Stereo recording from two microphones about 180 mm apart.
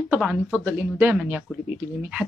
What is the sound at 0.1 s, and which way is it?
Speech, 5° right (ahead or behind).